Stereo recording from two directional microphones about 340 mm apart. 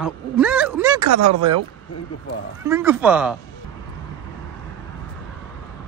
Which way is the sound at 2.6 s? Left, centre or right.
Centre.